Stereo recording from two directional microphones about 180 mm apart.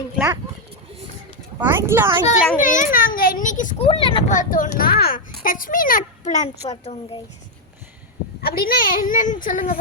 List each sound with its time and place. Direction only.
1.5 s speech: 10° right (ahead or behind)
2.6 s a child's voice: 50° left (ahead or behind)
3.8 s speech: 30° left (ahead or behind)
4.3 s a child's voice: 45° left (ahead or behind)
8.4 s a child's voice: 55° left (ahead or behind)